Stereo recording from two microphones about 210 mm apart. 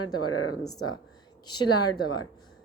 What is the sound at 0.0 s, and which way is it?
Speech, 90° left.